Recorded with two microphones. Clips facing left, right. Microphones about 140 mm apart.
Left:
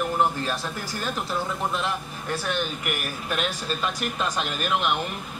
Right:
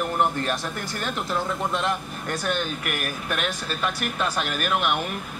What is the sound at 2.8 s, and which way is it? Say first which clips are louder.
Speech: right 1 dB; 70° right (ahead or behind).